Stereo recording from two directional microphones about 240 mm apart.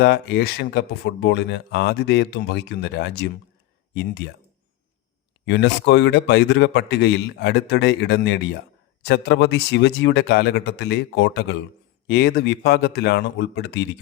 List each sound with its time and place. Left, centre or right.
0.0 s speech: left
5.5 s speech: left